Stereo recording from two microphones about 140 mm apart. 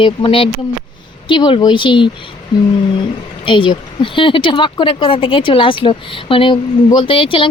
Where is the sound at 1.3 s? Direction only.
35° left (ahead or behind).